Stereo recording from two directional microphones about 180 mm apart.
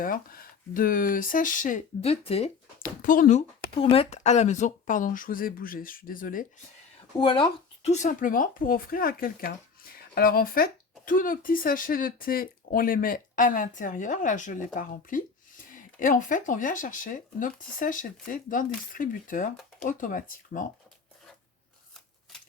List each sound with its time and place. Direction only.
0.0 s speech: 50° left (ahead or behind); by 2.5 s 35° left (ahead or behind)
2.7 s speech: 50° left (ahead or behind)
7.2 s speech: 25° left (ahead or behind); by 20.7 s 50° left (ahead or behind)